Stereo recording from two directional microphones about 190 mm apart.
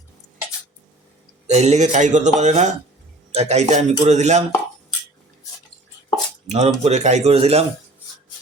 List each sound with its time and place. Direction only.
1.5 s a man's voice: 35° right (ahead or behind)
6.5 s a man's voice: 35° right (ahead or behind)